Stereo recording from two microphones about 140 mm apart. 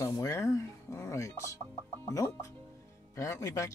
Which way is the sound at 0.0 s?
20° left (ahead or behind).